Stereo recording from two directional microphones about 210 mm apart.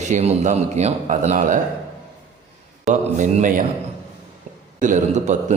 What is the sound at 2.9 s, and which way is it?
Speech, 35° right (ahead or behind).